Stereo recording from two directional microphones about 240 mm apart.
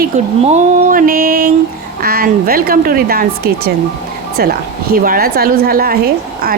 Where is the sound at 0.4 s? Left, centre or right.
Right.